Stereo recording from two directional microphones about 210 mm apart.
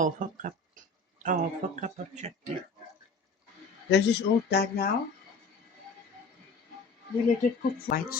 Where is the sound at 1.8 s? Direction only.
35° right (ahead or behind).